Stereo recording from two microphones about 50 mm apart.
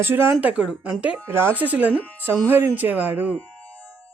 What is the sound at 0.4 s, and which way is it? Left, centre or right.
Speech, right.